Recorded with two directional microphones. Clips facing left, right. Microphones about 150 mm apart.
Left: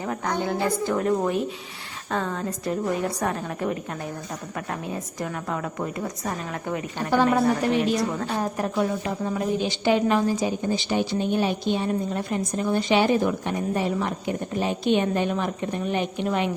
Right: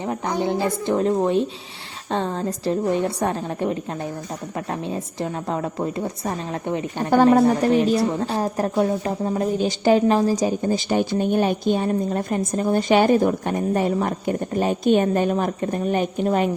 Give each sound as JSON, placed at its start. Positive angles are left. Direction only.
{"t": 0.0, "sound": "a woman's voice", "side_deg": -15}